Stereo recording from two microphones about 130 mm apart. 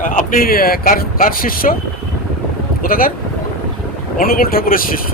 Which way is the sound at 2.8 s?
90° left.